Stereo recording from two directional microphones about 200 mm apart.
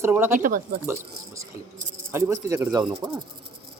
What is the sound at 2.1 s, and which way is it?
Speech, 15° right (ahead or behind).